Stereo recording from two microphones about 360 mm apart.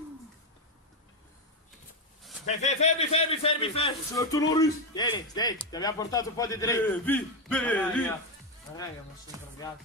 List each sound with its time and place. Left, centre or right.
2.4 s a man's voice: centre
9.3 s music: centre